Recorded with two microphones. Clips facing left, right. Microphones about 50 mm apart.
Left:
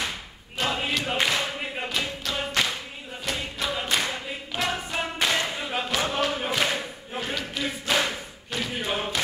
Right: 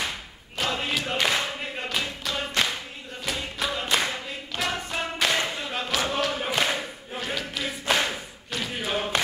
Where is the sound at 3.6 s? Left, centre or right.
Centre.